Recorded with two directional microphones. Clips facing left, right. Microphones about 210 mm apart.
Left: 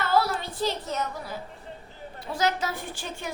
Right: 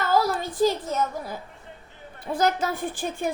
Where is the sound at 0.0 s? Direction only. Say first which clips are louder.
Right 2 dB; 45° right (ahead or behind).